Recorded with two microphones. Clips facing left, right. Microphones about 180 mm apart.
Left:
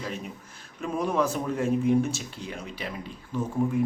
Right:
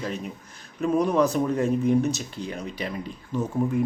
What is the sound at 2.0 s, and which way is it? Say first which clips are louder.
Speech: right 5 dB; 40° right (ahead or behind).